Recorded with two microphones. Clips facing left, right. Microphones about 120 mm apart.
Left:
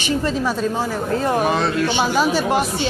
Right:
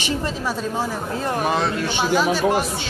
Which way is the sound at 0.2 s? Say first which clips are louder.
Left 4 dB; 5° right (ahead or behind).